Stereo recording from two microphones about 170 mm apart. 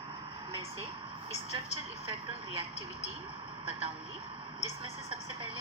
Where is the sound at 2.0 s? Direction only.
35° right (ahead or behind).